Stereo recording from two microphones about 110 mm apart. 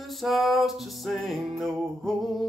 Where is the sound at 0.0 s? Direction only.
Centre (ahead or behind).